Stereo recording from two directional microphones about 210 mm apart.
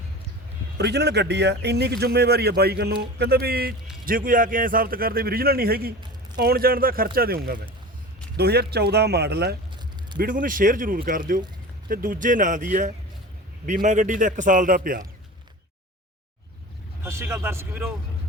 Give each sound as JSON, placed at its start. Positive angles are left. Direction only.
{"t": 0.8, "sound": "speech", "side_deg": -55}
{"t": 10.2, "sound": "a man's voice", "side_deg": -40}
{"t": 17.0, "sound": "speech", "side_deg": -10}